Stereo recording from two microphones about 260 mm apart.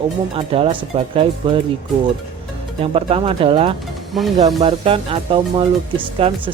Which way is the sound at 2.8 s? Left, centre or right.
Right.